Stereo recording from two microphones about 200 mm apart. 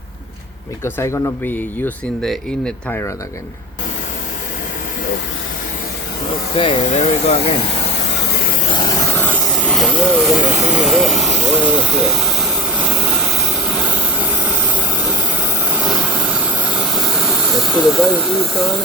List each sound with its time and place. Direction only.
0.9 s speech: 10° left (ahead or behind)
6.6 s speech: 30° left (ahead or behind)
8.7 s vehicle: 20° left (ahead or behind); by 13.9 s centre (ahead or behind)
16.9 s hiss: centre (ahead or behind)